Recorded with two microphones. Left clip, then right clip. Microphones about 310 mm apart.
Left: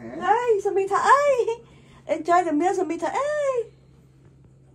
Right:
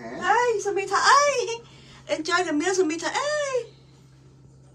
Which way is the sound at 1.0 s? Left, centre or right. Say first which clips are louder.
Even; centre.